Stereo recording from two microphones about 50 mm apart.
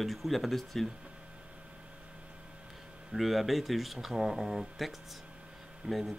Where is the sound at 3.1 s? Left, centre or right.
Centre.